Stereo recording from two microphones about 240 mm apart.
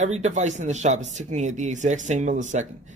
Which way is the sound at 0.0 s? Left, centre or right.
Right.